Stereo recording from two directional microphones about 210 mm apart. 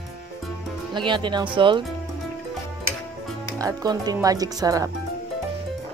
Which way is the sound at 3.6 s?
15° right (ahead or behind).